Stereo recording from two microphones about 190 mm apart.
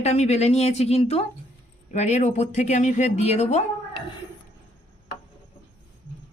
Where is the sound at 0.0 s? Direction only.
35° left (ahead or behind).